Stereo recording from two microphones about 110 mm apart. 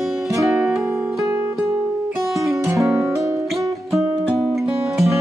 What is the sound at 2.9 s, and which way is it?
Music, 5° right (ahead or behind).